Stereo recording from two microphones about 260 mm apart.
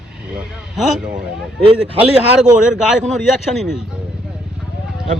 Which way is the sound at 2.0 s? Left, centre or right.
Centre.